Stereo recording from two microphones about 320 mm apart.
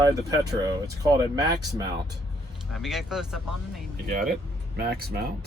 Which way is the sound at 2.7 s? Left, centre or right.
Centre.